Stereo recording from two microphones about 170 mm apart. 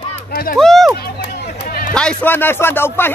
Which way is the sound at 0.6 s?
Centre (ahead or behind).